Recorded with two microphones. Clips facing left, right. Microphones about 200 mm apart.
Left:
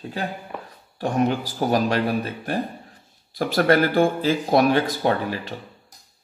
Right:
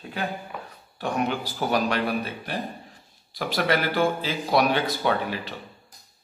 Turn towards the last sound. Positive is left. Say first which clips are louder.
# left 3 dB
turn(degrees=40)  # may be behind; listen again after turning